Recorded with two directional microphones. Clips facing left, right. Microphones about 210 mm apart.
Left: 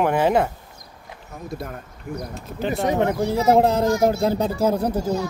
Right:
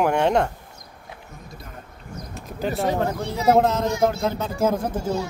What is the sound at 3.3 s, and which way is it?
Speech, 30° left (ahead or behind).